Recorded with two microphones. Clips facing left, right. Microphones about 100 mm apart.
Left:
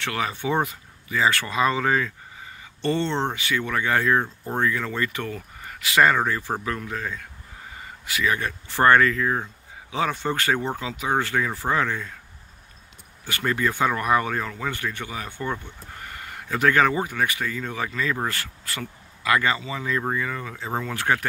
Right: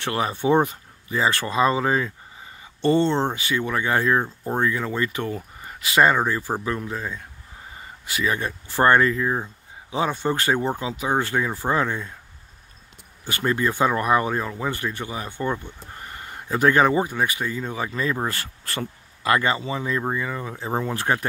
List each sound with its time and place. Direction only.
0.0 s speech: 30° right (ahead or behind)
3.1 s speech: 10° right (ahead or behind)
3.3 s speech: 25° right (ahead or behind)
4.2 s speech: 10° right (ahead or behind)
13.3 s speech: 25° right (ahead or behind)
18.3 s speech: 30° right (ahead or behind)
20.9 s speech: 30° right (ahead or behind)